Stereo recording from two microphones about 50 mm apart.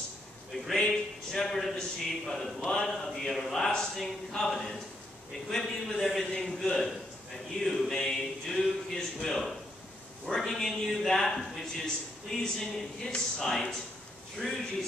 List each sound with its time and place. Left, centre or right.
0.7 s a man's voice: centre
7.9 s a man's voice: centre
14.4 s a man's voice: right